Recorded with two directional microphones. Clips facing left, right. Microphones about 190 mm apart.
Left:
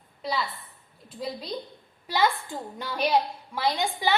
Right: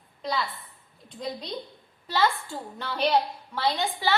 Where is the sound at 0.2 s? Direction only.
5° left (ahead or behind).